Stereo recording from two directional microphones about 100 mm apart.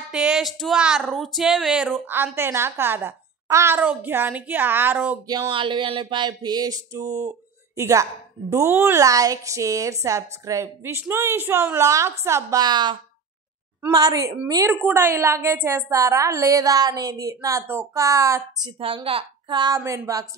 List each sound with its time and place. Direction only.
0.1 s speech: 5° right (ahead or behind); by 3.8 s 30° right (ahead or behind)
3.8 s a woman's voice: 20° right (ahead or behind)
5.5 s a woman's voice: 55° right (ahead or behind); by 9.0 s 25° right (ahead or behind)
9.0 s a woman's voice: 35° right (ahead or behind)
12.5 s a woman's voice: 45° right (ahead or behind)
15.0 s a woman's voice: 25° right (ahead or behind)
19.5 s a woman's voice: 45° right (ahead or behind)
19.8 s a woman's voice: 35° right (ahead or behind)